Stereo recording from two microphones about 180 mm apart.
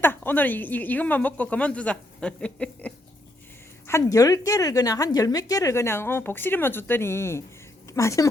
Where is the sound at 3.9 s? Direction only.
20° left (ahead or behind).